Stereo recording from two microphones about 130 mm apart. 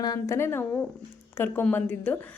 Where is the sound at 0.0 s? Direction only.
30° left (ahead or behind).